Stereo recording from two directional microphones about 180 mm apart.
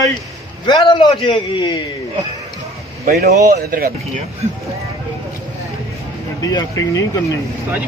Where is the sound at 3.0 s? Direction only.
60° right (ahead or behind).